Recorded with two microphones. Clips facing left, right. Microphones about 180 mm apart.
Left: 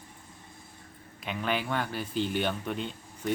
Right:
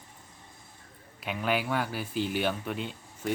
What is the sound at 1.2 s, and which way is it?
Speech, 5° right (ahead or behind).